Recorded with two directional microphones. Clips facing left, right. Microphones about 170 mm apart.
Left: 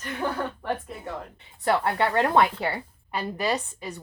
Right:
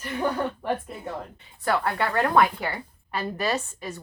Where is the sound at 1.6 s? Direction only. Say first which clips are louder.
Left 2 dB; 25° left (ahead or behind).